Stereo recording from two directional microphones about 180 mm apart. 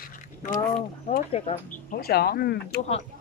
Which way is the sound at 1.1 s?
35° left (ahead or behind).